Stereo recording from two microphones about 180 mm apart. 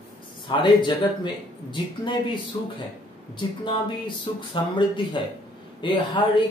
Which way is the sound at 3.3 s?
25° left (ahead or behind).